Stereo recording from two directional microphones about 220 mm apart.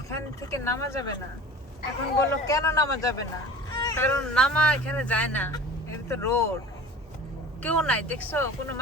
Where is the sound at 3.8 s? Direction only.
15° left (ahead or behind).